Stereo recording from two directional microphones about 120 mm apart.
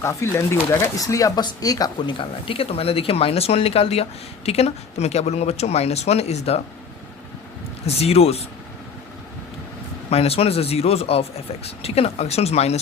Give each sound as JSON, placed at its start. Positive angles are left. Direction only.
{"t": 0.0, "sound": "speech", "side_deg": 25}
{"t": 7.9, "sound": "speech", "side_deg": 60}
{"t": 10.1, "sound": "speech", "side_deg": 55}